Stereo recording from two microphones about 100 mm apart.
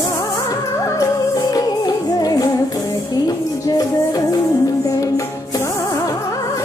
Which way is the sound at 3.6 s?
40° left (ahead or behind).